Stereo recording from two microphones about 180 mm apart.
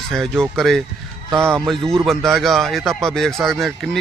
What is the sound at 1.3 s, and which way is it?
Speech, 15° right (ahead or behind).